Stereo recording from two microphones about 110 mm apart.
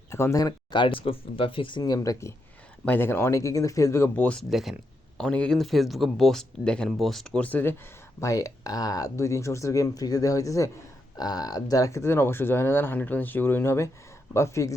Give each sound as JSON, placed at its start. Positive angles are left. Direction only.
{"t": 0.1, "sound": "speech", "side_deg": 25}
{"t": 0.7, "sound": "speech", "side_deg": 50}
{"t": 2.8, "sound": "speech", "side_deg": 20}
{"t": 4.1, "sound": "speech", "side_deg": 15}
{"t": 4.4, "sound": "speech", "side_deg": 0}
{"t": 8.2, "sound": "speech", "side_deg": 30}